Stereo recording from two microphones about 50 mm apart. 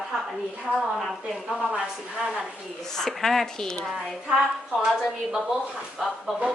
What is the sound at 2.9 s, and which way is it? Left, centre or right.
Speech, centre.